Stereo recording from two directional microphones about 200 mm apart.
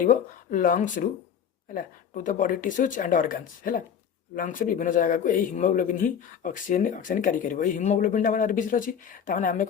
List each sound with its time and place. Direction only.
0.0 s speech: 40° left (ahead or behind)